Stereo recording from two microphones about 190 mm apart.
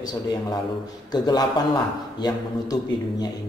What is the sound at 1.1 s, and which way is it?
Speech, 20° left (ahead or behind).